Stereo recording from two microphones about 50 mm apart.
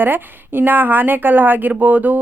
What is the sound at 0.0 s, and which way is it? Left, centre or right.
A woman's voice, right.